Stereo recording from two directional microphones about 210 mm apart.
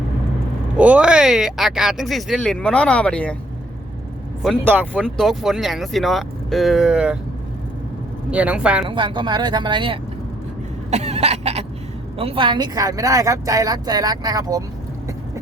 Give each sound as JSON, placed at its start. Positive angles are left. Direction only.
{"t": 0.8, "sound": "speech", "side_deg": -5}
{"t": 4.6, "sound": "speech", "side_deg": -10}
{"t": 4.9, "sound": "speech", "side_deg": 5}
{"t": 8.3, "sound": "speech", "side_deg": -5}
{"t": 8.9, "sound": "speech", "side_deg": -20}
{"t": 10.9, "sound": "cough", "side_deg": -30}
{"t": 12.1, "sound": "speech", "side_deg": -25}